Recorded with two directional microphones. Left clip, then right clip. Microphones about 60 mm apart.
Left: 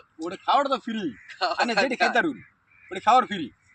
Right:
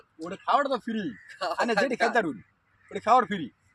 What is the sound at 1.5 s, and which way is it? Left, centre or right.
Speech, right.